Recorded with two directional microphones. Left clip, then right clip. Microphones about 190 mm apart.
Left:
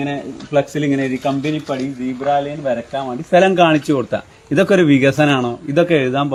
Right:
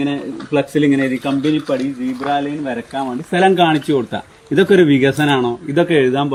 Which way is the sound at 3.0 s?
25° left (ahead or behind).